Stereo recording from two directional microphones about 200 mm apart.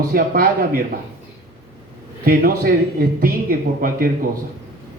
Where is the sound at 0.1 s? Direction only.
45° right (ahead or behind).